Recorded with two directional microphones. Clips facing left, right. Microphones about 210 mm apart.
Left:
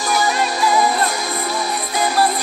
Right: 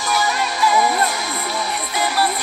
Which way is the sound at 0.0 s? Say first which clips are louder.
Left 2 dB; 35° left (ahead or behind).